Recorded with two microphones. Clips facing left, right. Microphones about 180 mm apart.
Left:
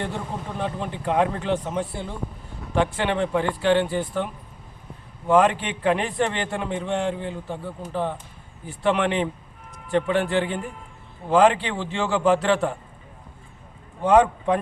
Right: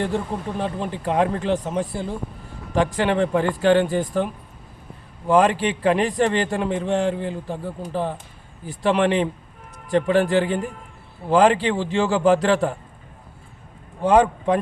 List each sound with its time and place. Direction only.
0.6 s a man's voice: 35° right (ahead or behind)
5.3 s a man's voice: 35° right (ahead or behind)
14.0 s a man's voice: 35° right (ahead or behind)